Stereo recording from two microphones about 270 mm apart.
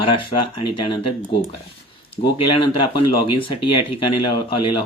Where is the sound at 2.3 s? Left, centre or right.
Centre.